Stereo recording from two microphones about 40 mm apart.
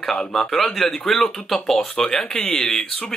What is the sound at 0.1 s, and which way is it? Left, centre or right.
Speech, centre.